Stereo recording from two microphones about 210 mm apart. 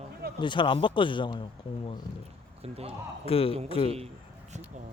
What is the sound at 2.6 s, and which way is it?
Speech, 30° right (ahead or behind).